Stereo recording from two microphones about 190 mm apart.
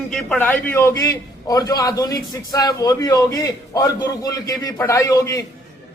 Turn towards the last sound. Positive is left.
turn(degrees=15)  # may be behind; listen again after turning